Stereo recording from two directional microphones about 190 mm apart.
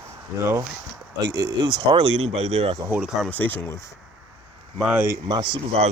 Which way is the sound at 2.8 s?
5° right (ahead or behind).